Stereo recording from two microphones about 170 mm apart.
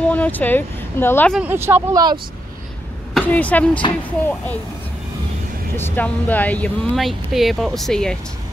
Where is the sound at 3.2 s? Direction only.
10° left (ahead or behind).